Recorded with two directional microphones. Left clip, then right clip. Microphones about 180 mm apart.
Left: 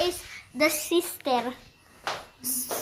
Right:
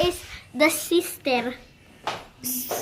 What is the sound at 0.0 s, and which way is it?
A child's voice, 10° right (ahead or behind).